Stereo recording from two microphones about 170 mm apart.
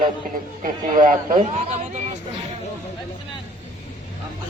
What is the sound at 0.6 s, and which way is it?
A man's voice, 50° right (ahead or behind).